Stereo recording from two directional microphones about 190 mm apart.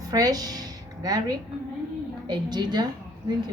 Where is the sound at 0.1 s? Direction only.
20° right (ahead or behind).